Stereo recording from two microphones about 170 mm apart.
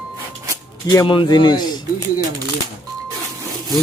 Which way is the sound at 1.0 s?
30° left (ahead or behind).